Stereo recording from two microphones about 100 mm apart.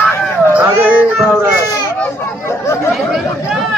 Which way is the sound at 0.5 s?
15° right (ahead or behind).